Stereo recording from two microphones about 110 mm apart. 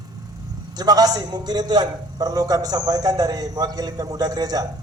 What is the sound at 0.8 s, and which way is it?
A man's voice, 35° right (ahead or behind).